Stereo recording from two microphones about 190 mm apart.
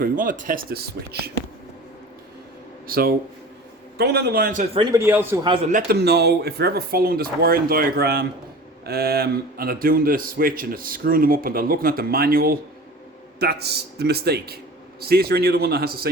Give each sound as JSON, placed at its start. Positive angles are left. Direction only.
{"t": 0.0, "sound": "a man's voice", "side_deg": -45}
{"t": 2.8, "sound": "a man's voice", "side_deg": -50}
{"t": 4.7, "sound": "a man's voice", "side_deg": -25}
{"t": 4.9, "sound": "a man's voice", "side_deg": -10}
{"t": 5.6, "sound": "a man's voice", "side_deg": -45}
{"t": 6.0, "sound": "a man's voice", "side_deg": -60}